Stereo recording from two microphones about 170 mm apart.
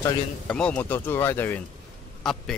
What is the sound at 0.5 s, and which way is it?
A man's voice, 5° left (ahead or behind).